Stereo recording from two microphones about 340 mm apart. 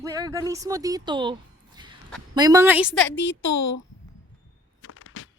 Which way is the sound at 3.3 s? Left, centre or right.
Left.